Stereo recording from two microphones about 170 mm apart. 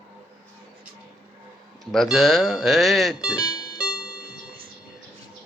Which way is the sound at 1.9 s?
Centre (ahead or behind).